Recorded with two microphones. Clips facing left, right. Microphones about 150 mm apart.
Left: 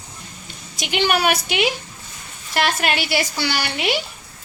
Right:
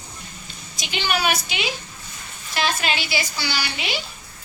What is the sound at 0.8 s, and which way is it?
Speech, 65° left (ahead or behind).